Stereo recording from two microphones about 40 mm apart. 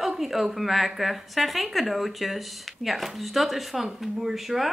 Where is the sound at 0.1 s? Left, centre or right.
Centre.